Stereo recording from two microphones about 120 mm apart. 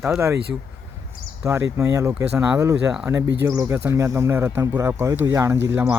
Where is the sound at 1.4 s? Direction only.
25° right (ahead or behind).